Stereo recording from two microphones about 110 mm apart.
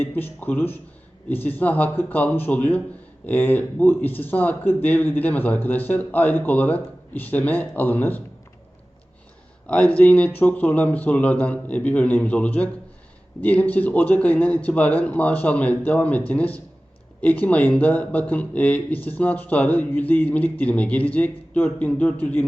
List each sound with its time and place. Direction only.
0.0 s speech: 20° left (ahead or behind)
9.6 s speech: 15° left (ahead or behind)